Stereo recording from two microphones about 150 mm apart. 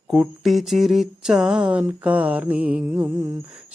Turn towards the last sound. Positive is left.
turn(degrees=-20)  # may be behind; listen again after turning